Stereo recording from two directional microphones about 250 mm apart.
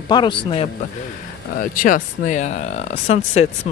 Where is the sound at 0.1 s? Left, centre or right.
Centre.